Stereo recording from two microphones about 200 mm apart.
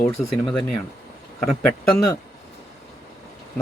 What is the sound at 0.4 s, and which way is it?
Speech, centre (ahead or behind).